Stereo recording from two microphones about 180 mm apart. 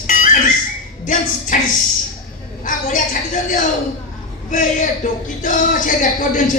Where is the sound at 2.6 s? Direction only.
45° left (ahead or behind).